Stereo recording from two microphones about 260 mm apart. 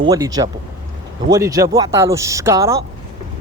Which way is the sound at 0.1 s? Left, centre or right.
Centre.